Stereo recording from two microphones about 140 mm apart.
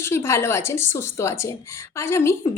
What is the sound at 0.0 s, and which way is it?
A woman's voice, 20° left (ahead or behind).